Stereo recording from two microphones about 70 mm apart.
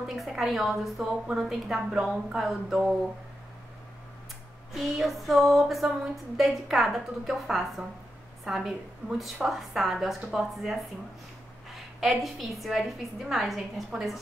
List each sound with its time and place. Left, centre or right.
0.0 s a woman's voice: centre
4.7 s a woman's voice: centre